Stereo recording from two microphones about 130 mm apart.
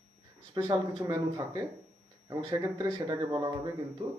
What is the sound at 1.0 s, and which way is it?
A man's voice, 25° right (ahead or behind).